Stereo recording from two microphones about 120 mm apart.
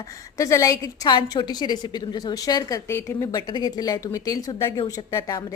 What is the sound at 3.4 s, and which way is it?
Speech, 35° left (ahead or behind).